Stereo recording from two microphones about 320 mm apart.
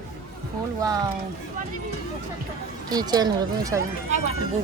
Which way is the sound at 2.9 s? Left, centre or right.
Centre.